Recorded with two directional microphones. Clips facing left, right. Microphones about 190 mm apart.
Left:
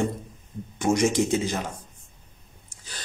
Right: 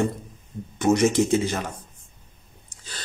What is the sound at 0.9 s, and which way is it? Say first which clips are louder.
Speech: right 3 dB; 15° left (ahead or behind).